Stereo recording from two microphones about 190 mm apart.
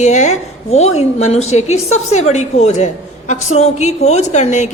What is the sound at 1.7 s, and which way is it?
Speech, 90° left.